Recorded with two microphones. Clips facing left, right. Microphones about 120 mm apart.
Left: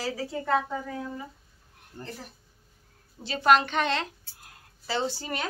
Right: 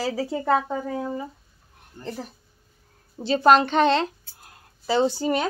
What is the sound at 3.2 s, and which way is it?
Speech, 30° right (ahead or behind).